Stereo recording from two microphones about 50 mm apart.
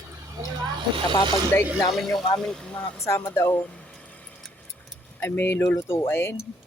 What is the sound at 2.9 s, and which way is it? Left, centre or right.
Speech, left.